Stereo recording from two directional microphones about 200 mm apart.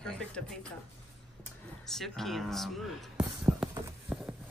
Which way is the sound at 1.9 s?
Centre (ahead or behind).